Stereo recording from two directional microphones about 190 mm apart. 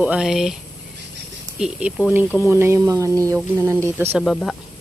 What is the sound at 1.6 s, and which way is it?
A woman's voice, 5° right (ahead or behind).